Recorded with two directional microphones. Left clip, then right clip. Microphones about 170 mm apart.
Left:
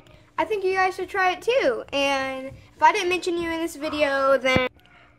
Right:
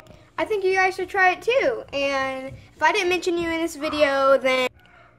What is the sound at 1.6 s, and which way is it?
Speech, 25° left (ahead or behind).